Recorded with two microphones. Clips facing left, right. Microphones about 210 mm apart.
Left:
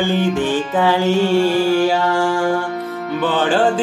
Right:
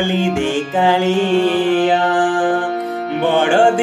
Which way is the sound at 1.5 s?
20° right (ahead or behind).